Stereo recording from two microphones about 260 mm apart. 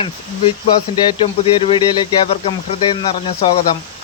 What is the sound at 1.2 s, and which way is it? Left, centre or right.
Insect, left.